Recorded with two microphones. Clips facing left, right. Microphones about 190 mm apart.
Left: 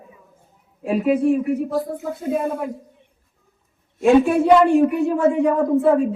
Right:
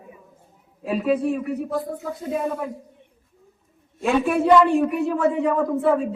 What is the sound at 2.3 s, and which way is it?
Speech, centre (ahead or behind).